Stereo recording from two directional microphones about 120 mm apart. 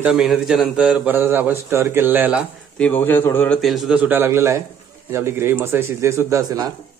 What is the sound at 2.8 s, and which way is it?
Speech, 15° left (ahead or behind).